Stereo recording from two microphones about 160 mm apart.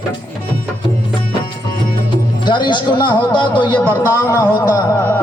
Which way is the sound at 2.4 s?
30° left (ahead or behind).